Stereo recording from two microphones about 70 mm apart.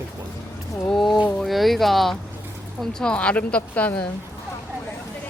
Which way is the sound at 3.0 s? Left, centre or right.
Centre.